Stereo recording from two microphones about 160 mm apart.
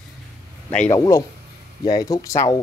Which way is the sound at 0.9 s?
20° left (ahead or behind).